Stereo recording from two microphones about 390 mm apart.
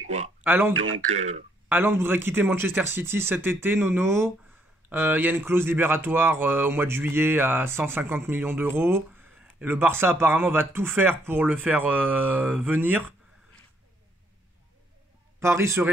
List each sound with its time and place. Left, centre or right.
0.4 s speech: centre
0.7 s speech: right
1.0 s a man's voice: centre
1.7 s speech: centre
15.4 s a man's voice: centre